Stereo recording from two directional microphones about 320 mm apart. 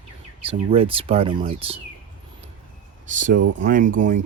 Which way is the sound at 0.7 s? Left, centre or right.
Centre.